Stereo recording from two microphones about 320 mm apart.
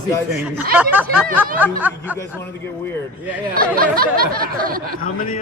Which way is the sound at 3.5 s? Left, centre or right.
Right.